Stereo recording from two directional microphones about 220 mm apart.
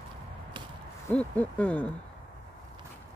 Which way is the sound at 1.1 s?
5° left (ahead or behind).